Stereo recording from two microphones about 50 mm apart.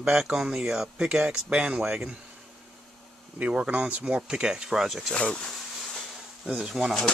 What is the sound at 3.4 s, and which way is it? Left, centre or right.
Speech, right.